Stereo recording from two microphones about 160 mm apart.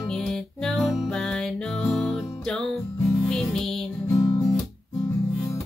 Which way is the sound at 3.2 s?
5° left (ahead or behind).